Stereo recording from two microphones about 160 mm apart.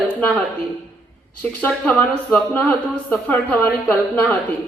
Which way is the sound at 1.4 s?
10° left (ahead or behind).